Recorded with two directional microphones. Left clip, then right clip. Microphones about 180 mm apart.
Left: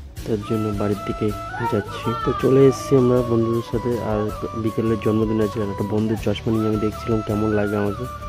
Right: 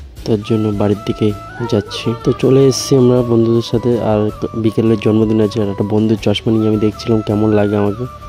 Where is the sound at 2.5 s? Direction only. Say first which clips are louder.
Right 3 dB; 35° right (ahead or behind).